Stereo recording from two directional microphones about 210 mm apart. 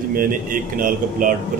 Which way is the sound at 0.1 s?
40° right (ahead or behind).